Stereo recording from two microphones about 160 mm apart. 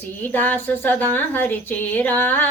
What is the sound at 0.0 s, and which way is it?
A woman's voice, 10° left (ahead or behind).